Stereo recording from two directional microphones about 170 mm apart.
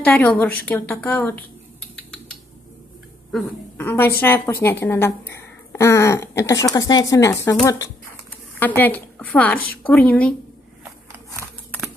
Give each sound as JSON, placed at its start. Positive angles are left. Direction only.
{"t": 0.0, "sound": "a woman's voice", "side_deg": 5}
{"t": 3.7, "sound": "a woman's voice", "side_deg": 15}
{"t": 8.5, "sound": "a woman's voice", "side_deg": 10}